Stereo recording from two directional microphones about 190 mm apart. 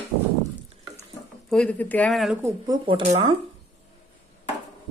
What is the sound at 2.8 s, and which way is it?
Speech, 30° right (ahead or behind).